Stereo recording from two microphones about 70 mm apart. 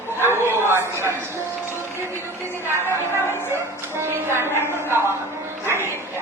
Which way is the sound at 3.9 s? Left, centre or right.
Right.